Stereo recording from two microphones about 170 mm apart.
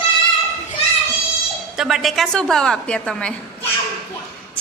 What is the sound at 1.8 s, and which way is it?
A woman's voice, centre (ahead or behind).